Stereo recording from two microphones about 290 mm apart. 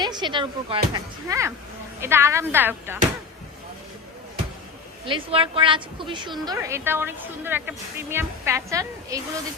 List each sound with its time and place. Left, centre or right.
0.0 s a woman's voice: centre
5.0 s a woman's voice: centre